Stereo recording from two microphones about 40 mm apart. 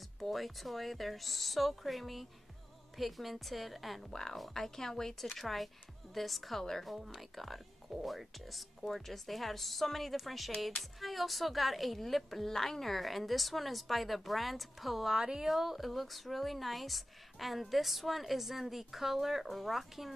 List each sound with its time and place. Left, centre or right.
0.2 s speech: centre
4.1 s speech: centre
6.6 s speech: centre
6.9 s speech: centre
15.1 s a woman's voice: centre
15.4 s speech: centre